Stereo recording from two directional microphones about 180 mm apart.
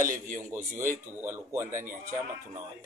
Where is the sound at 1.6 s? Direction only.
45° right (ahead or behind).